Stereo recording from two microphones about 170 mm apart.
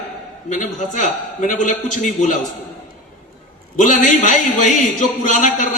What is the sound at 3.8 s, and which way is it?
A man's voice, 50° left (ahead or behind).